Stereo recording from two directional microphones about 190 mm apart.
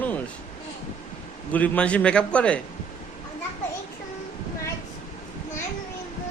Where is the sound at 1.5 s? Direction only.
10° left (ahead or behind).